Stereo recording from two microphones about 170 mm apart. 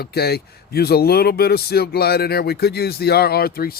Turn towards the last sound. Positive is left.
turn(degrees=65)  # may be behind; listen again after turning